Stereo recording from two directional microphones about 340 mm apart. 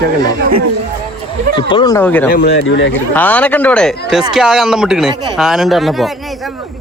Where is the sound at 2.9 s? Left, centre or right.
Centre.